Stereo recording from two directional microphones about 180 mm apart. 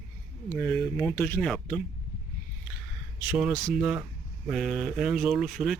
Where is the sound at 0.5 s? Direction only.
10° left (ahead or behind).